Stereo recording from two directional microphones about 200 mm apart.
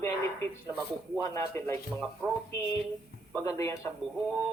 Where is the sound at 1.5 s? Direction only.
10° left (ahead or behind).